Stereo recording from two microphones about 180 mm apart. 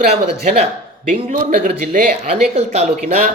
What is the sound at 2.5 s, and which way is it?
Speech, 35° right (ahead or behind).